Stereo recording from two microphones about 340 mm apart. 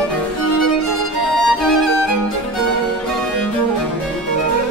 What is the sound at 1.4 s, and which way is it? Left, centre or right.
Music, centre.